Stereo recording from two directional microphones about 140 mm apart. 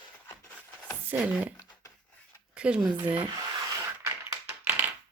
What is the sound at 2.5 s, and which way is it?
Speech, 5° right (ahead or behind).